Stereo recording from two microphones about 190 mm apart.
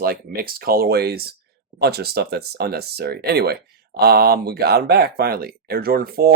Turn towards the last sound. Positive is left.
turn(degrees=-50)  # may be behind; listen again after turning